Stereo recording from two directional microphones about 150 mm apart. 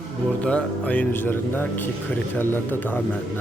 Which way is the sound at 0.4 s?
10° left (ahead or behind).